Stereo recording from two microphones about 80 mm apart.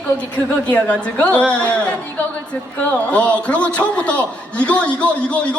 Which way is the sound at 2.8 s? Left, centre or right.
Centre.